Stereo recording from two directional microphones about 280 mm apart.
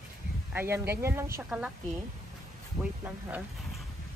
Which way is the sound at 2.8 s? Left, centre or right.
Centre.